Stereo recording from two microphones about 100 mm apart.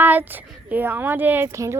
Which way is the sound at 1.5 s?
30° right (ahead or behind).